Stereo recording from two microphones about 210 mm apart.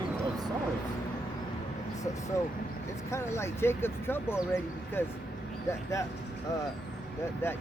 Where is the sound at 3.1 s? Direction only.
15° left (ahead or behind).